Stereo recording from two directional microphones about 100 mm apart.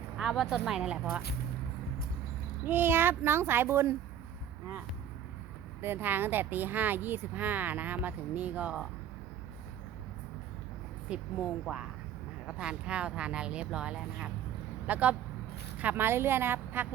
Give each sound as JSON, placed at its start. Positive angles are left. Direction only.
{"t": 0.2, "sound": "speech", "side_deg": -5}
{"t": 2.6, "sound": "speech", "side_deg": -20}
{"t": 5.8, "sound": "speech", "side_deg": -20}
{"t": 11.1, "sound": "speech", "side_deg": -10}